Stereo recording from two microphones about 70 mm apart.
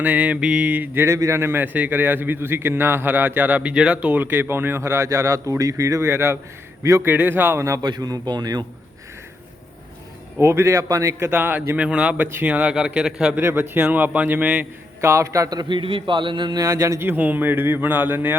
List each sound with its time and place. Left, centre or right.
0.0 s a man's voice: right
1.0 s a man's voice: right
1.6 s a man's voice: right
6.1 s a man's voice: right
7.8 s speech: right
10.4 s speech: right
11.3 s speech: right; by 13.3 s centre
13.3 s a man's voice: right
15.0 s speech: right
16.3 s speech: right
16.6 s speech: right
17.0 s a man's voice: right